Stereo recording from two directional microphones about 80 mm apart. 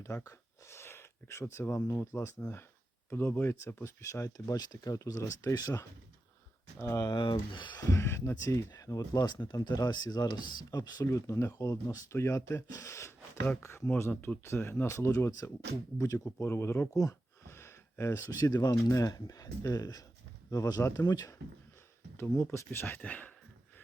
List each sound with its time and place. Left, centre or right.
0.0 s speech: left
6.7 s speech: left
7.1 s speech: left
7.8 s speech: left
9.1 s speech: left
12.1 s speech: left
16.9 s speech: left
17.4 s a sound: left
18.3 s speech: left
20.8 s speech: left
22.5 s speech: left
23.0 s speech: centre